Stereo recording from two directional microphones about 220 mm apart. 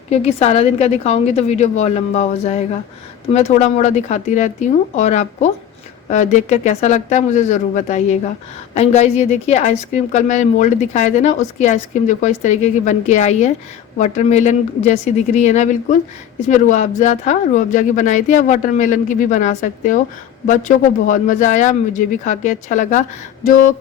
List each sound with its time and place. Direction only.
0.1 s a woman's voice: 30° left (ahead or behind)